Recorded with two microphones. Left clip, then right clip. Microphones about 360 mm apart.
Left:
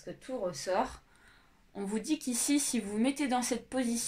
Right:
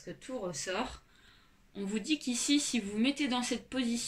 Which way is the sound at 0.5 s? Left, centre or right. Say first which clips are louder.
Left 5 dB; centre.